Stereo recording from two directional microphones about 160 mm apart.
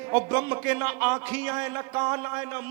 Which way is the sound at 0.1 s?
10° right (ahead or behind).